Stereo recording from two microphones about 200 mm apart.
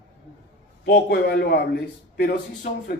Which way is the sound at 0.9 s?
55° left (ahead or behind).